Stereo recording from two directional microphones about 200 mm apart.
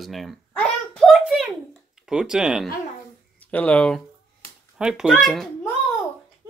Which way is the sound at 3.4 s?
5° left (ahead or behind).